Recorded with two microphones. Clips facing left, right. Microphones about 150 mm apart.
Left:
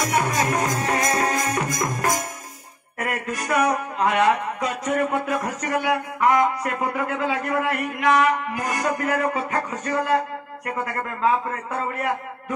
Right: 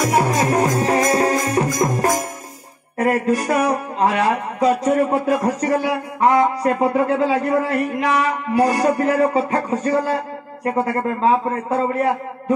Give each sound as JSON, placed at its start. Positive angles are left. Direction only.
{"t": 0.0, "sound": "music", "side_deg": -30}
{"t": 3.0, "sound": "a man's voice", "side_deg": -35}